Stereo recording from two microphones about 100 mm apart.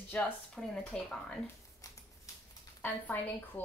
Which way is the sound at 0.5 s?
5° left (ahead or behind).